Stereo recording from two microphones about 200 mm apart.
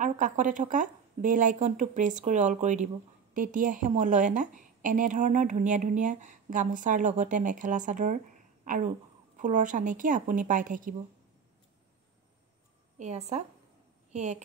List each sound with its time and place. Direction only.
0.0 s a woman's voice: 40° right (ahead or behind)
13.0 s a woman's voice: 35° right (ahead or behind)